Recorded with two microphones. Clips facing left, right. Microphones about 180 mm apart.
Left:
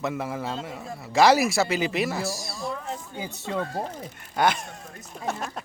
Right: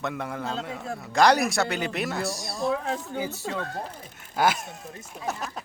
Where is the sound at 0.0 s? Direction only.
5° left (ahead or behind).